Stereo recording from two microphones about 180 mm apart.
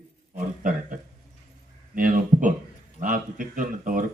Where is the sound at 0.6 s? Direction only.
45° right (ahead or behind).